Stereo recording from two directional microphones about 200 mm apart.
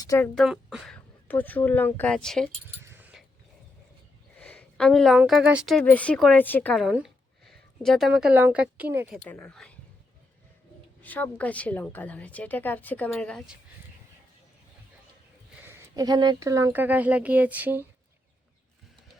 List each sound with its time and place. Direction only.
0.0 s a woman's voice: 15° left (ahead or behind)
0.3 s a woman's voice: centre (ahead or behind)
2.8 s a sound: 10° right (ahead or behind)
4.4 s a woman's voice: 5° left (ahead or behind)
6.8 s speech: 5° right (ahead or behind)
9.2 s a woman's voice: 10° left (ahead or behind)
11.0 s a woman's voice: 10° left (ahead or behind)
15.6 s speech: 15° right (ahead or behind)